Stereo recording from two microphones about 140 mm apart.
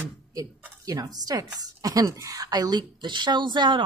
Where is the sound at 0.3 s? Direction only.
25° right (ahead or behind).